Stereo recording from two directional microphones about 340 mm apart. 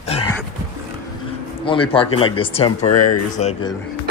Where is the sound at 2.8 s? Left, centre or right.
Left.